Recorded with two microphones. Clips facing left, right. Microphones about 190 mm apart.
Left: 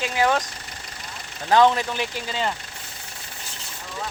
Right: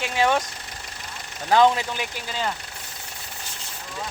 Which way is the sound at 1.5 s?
15° right (ahead or behind).